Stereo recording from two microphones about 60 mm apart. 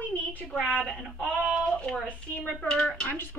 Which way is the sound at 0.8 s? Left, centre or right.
Centre.